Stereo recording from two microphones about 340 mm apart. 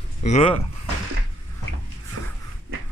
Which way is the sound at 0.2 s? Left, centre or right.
Centre.